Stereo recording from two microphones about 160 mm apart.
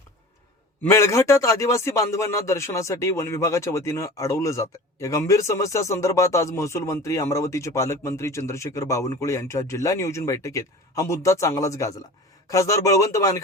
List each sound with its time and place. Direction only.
0.8 s a man's voice: 15° left (ahead or behind)